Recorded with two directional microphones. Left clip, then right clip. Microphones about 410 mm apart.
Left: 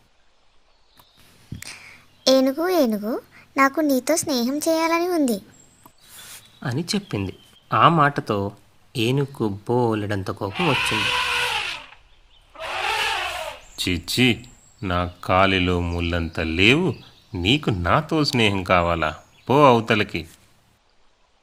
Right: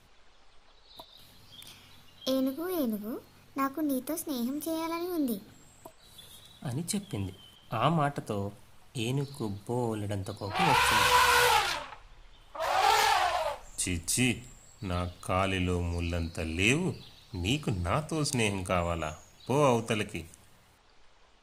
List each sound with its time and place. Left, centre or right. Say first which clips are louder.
2.2 s speech: left 13 dB; right
6.6 s speech: left 11 dB; right
10.5 s a sound: left 2 dB; centre
12.5 s wild animals: left 1 dB; centre
13.7 s speech: left 16 dB; right